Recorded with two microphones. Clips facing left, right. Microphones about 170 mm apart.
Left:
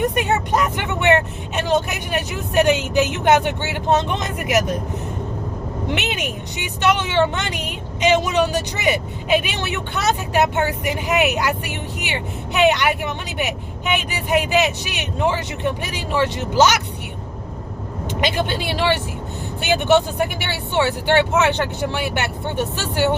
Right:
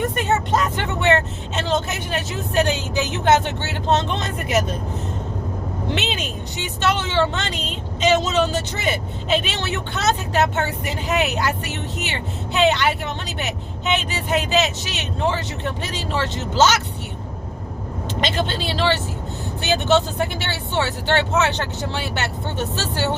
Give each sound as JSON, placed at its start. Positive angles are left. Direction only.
{"t": 0.0, "sound": "speech", "side_deg": 15}
{"t": 5.9, "sound": "speech", "side_deg": 15}
{"t": 18.2, "sound": "speech", "side_deg": 15}